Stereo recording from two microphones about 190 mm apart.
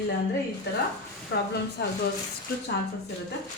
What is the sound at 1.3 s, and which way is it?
Speech, 65° left (ahead or behind).